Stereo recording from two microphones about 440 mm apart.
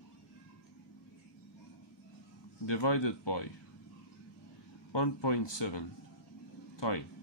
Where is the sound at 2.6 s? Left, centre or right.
Left.